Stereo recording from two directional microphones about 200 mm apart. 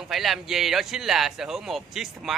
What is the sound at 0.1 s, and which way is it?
Speech, centre (ahead or behind).